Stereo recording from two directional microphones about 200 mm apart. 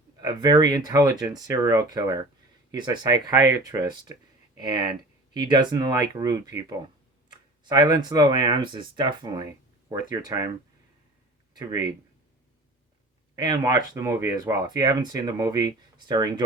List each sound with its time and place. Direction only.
0.2 s speech: 20° right (ahead or behind)
11.5 s speech: 20° right (ahead or behind)
13.3 s speech: 20° right (ahead or behind)